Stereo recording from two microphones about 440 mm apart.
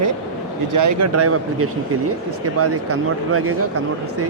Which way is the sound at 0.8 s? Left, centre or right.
Right.